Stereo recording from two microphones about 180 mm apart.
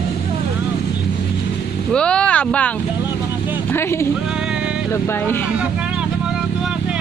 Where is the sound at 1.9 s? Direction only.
5° left (ahead or behind).